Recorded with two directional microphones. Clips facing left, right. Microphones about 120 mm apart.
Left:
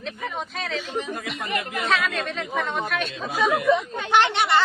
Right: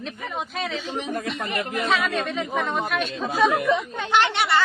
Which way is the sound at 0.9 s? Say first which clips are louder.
Even; 20° right (ahead or behind).